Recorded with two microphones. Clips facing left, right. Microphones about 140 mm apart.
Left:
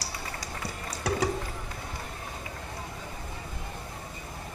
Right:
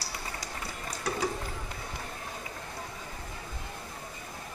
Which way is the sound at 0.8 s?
70° left (ahead or behind).